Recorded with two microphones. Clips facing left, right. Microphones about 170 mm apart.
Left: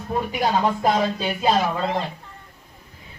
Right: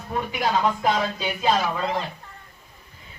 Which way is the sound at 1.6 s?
25° left (ahead or behind).